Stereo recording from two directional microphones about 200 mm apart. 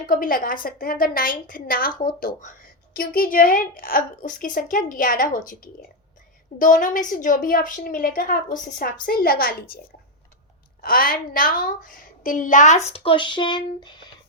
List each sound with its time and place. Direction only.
0.0 s a woman's voice: 45° left (ahead or behind)
6.6 s a woman's voice: 40° left (ahead or behind)
12.9 s speech: 25° left (ahead or behind)